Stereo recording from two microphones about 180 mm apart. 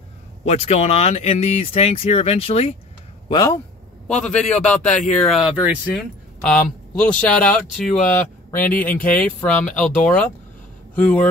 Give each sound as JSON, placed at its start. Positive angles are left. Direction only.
{"t": 0.5, "sound": "speech", "side_deg": 40}
{"t": 3.3, "sound": "speech", "side_deg": 20}
{"t": 4.1, "sound": "a man's voice", "side_deg": 5}
{"t": 7.0, "sound": "a man's voice", "side_deg": 5}